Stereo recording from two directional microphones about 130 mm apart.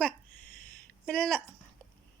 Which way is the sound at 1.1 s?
5° left (ahead or behind).